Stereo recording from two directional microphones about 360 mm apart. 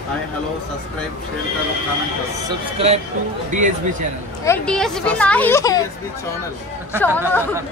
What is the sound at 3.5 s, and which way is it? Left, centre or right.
Speech, right.